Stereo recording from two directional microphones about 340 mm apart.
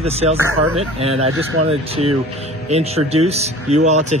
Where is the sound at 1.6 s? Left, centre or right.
Centre.